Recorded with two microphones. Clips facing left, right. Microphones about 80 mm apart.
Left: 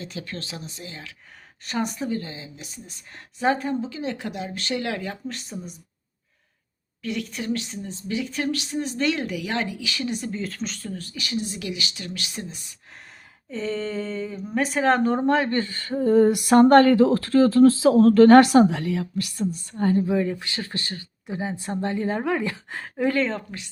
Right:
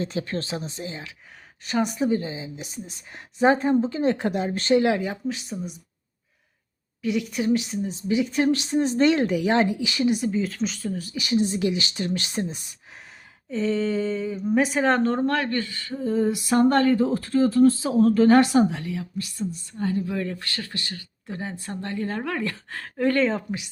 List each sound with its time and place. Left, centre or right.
0.0 s speech: right
1.6 s speech: centre
2.0 s speech: right
4.9 s speech: centre
5.3 s speech: centre
7.0 s speech: centre
13.5 s speech: centre
15.0 s speech: centre; by 19.8 s left
19.8 s speech: left
20.1 s a woman's voice: centre
20.6 s speech: left
21.2 s a woman's voice: centre
23.1 s speech: centre